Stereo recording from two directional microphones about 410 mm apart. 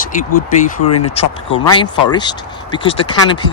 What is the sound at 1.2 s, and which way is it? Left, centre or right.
Speech, centre.